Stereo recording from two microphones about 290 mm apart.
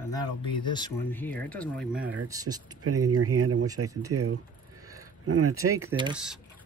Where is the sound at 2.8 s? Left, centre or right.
Right.